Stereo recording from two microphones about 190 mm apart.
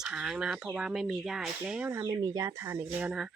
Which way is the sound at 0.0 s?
5° right (ahead or behind).